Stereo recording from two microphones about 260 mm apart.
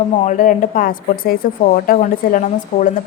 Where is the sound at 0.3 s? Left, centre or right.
Left.